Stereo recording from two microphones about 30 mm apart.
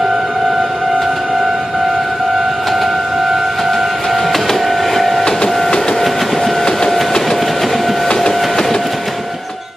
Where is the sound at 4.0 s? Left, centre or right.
Centre.